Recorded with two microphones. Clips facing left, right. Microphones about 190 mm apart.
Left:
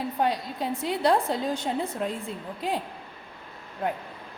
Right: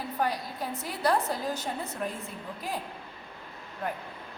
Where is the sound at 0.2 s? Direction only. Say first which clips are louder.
Left 3 dB; 25° left (ahead or behind).